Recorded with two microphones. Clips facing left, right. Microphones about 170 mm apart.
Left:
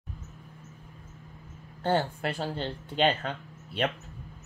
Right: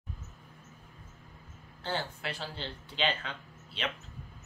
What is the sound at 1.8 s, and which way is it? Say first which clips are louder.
Speech: left 9 dB; 50° left (ahead or behind).